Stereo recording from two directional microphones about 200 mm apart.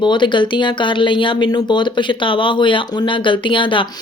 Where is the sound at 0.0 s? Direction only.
25° left (ahead or behind).